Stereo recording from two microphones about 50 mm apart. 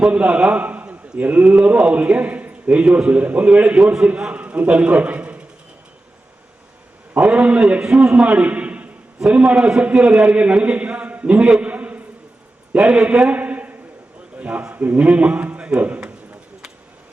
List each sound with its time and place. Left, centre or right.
0.1 s a man's voice: right
7.2 s a man's voice: right
7.8 s a man's voice: centre
8.1 s a man's voice: right
11.6 s a sound: right
12.7 s a man's voice: centre
13.1 s a sound: right
14.3 s a man's voice: right